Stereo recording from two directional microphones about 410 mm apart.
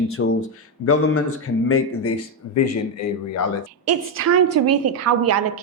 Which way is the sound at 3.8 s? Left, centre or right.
Right.